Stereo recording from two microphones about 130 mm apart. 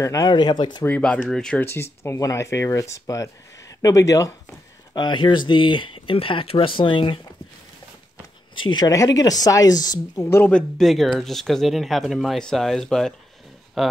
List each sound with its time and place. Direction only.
0.0 s speech: 25° left (ahead or behind)
0.8 s speech: 10° left (ahead or behind)
1.7 s speech: 20° left (ahead or behind)
4.9 s speech: 35° left (ahead or behind)
8.5 s speech: 35° left (ahead or behind); by 10.5 s 20° left (ahead or behind)
10.5 s speech: centre (ahead or behind)